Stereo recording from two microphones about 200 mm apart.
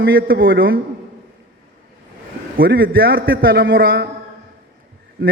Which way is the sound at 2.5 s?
50° right (ahead or behind).